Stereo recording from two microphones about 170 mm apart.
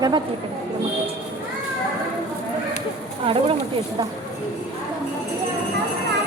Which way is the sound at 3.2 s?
35° right (ahead or behind).